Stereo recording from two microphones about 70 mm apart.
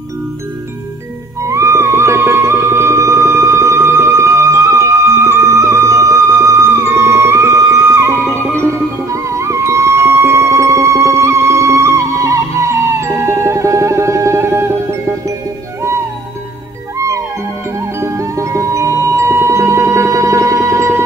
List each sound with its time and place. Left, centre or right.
1.4 s music: right
17.7 s music: right